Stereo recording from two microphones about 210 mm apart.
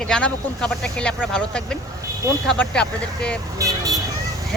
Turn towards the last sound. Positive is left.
turn(degrees=-15)  # may be behind; listen again after turning